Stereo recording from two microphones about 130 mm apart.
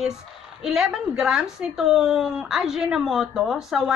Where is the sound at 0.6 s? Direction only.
5° right (ahead or behind).